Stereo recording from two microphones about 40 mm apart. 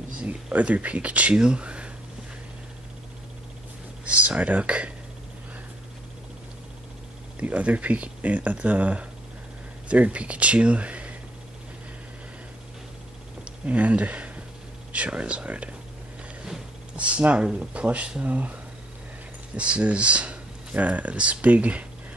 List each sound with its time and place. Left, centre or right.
0.2 s speech: right
4.0 s speech: right
7.4 s speech: right
13.7 s speech: right
16.9 s speech: right